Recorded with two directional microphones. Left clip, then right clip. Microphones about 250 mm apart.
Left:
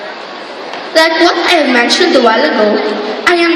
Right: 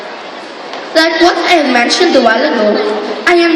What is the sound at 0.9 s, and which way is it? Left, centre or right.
A woman's voice, centre.